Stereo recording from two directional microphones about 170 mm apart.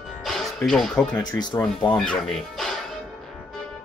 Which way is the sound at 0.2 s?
Centre (ahead or behind).